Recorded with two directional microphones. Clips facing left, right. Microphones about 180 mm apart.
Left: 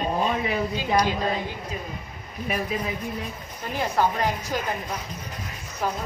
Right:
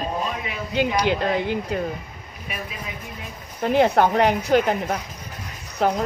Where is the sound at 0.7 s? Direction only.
70° right (ahead or behind).